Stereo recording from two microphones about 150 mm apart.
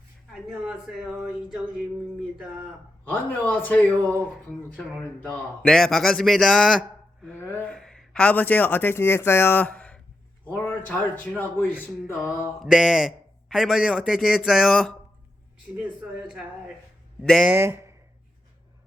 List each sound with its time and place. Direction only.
0.3 s speech: 5° right (ahead or behind)
3.0 s a man's voice: 10° left (ahead or behind)
7.3 s a man's voice: 10° left (ahead or behind)
12.7 s speech: 5° right (ahead or behind)
15.7 s speech: 15° right (ahead or behind)
17.2 s speech: 5° left (ahead or behind)
17.5 s speech: 15° right (ahead or behind)